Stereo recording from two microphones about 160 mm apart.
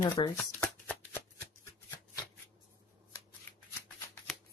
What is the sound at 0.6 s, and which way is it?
Shuffling cards, 10° left (ahead or behind).